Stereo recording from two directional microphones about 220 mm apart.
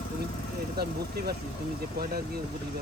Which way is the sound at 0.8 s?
45° right (ahead or behind).